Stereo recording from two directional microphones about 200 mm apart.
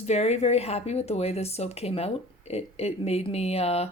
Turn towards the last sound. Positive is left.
turn(degrees=30)  # may be behind; listen again after turning